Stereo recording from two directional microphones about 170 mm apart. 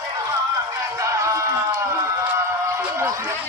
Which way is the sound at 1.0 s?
20° right (ahead or behind).